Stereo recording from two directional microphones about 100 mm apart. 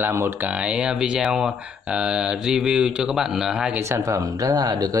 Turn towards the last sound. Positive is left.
turn(degrees=-40)  # may be behind; listen again after turning